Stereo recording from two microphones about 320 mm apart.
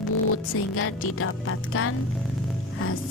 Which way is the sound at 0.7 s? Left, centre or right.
Left.